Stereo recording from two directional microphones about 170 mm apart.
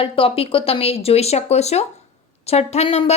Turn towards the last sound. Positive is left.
turn(degrees=40)  # may be behind; listen again after turning